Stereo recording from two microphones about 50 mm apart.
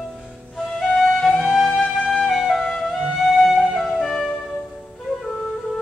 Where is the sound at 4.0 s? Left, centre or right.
Centre.